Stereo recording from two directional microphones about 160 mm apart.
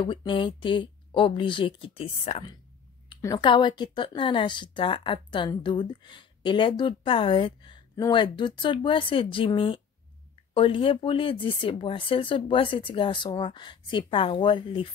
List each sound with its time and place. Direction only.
0.0 s a woman's voice: 30° left (ahead or behind)